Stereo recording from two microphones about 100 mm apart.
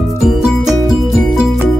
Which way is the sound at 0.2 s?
5° right (ahead or behind).